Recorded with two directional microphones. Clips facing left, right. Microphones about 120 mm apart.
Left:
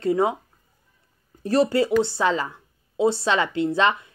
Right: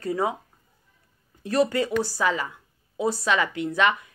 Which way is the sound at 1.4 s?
30° left (ahead or behind).